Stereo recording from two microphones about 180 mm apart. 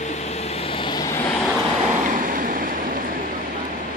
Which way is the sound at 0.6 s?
30° left (ahead or behind).